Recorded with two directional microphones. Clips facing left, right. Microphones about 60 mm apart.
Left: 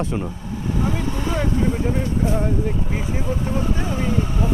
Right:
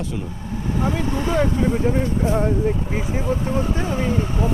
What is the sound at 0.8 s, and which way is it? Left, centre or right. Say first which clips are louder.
Speech: right 3 dB; right.